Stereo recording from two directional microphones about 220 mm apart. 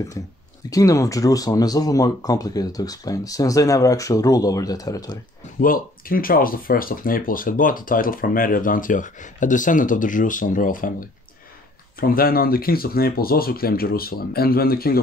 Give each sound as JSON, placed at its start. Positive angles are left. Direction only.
{"t": 0.7, "sound": "speech", "side_deg": 15}
{"t": 5.6, "sound": "speech", "side_deg": 40}